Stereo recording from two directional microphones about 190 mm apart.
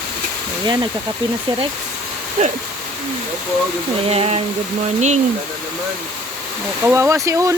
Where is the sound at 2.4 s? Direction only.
35° right (ahead or behind).